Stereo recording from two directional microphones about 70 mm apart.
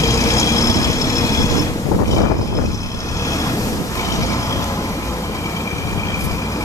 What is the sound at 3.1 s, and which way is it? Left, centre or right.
Train, left.